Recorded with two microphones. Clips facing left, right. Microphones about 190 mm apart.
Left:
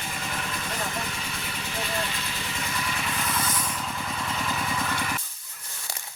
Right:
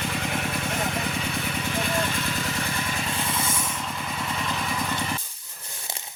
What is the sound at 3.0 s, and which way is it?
Vehicle, 25° right (ahead or behind).